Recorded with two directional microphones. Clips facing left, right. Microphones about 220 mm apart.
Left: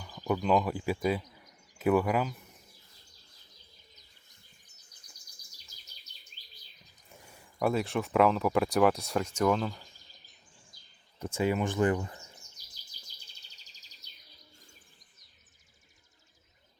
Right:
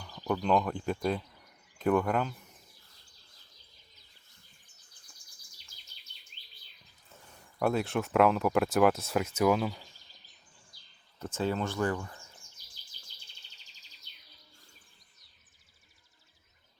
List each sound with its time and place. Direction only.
0.0 s speech: 5° left (ahead or behind)
5.1 s chirp: 40° left (ahead or behind)
7.1 s a sound: 10° left (ahead or behind)
7.6 s speech: centre (ahead or behind)
11.2 s speech: 10° left (ahead or behind)
12.4 s bird vocalization: 40° left (ahead or behind)